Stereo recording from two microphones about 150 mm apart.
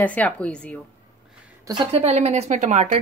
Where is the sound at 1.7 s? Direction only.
30° right (ahead or behind).